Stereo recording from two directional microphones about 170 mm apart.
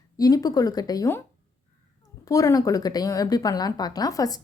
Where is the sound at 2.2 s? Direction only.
20° left (ahead or behind).